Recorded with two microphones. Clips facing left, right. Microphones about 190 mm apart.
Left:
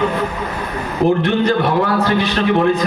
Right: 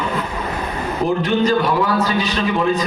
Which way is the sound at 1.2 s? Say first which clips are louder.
Left 1 dB; 60° left (ahead or behind).